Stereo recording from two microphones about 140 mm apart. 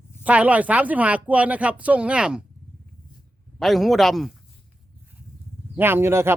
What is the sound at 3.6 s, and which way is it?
Speech, centre (ahead or behind).